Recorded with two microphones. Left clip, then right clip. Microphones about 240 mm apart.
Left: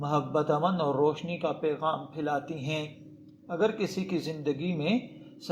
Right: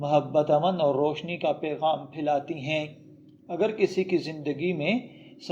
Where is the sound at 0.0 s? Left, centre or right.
Left.